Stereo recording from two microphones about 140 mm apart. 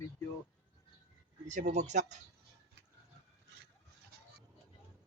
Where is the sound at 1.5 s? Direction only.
60° right (ahead or behind).